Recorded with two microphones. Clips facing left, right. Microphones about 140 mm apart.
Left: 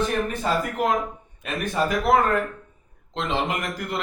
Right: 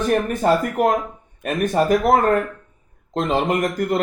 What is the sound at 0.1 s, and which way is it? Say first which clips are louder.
Speech: right 7 dB; 50° right (ahead or behind).